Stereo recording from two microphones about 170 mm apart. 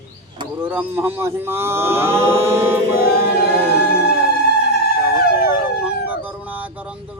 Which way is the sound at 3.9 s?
70° left (ahead or behind).